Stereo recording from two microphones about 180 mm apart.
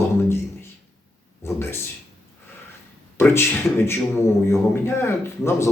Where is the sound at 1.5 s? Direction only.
15° left (ahead or behind).